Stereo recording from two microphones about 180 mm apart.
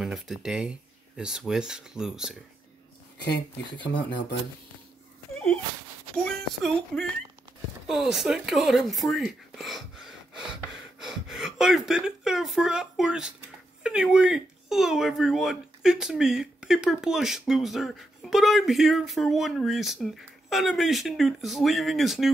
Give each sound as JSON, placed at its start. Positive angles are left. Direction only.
{"t": 0.0, "sound": "speech", "side_deg": 0}
{"t": 3.7, "sound": "speech", "side_deg": 25}
{"t": 6.1, "sound": "speech", "side_deg": 5}